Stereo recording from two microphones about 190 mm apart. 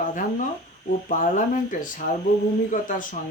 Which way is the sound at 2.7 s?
45° left (ahead or behind).